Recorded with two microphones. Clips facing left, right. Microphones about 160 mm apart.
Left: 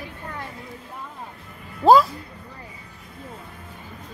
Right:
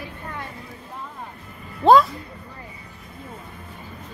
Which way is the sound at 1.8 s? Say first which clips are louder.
Even; 5° left (ahead or behind).